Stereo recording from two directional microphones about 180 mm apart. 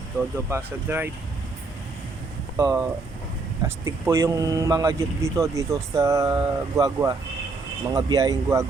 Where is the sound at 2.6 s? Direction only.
15° right (ahead or behind).